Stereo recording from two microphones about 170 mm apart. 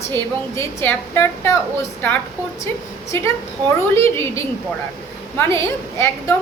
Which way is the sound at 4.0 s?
15° left (ahead or behind).